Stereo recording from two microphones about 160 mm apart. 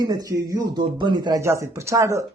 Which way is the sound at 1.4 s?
15° right (ahead or behind).